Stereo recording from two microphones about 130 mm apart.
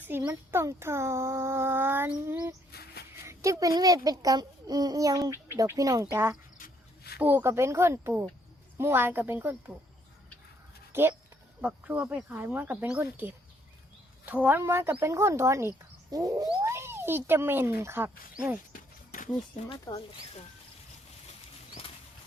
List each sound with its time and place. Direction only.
0.0 s speech: 15° right (ahead or behind)
11.6 s speech: 10° right (ahead or behind)
18.7 s a sound: 90° left
19.6 s speech: 65° left (ahead or behind)